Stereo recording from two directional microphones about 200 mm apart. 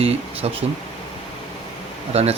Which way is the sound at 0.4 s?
30° right (ahead or behind).